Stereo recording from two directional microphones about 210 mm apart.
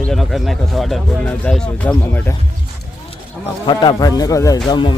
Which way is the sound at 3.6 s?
20° left (ahead or behind).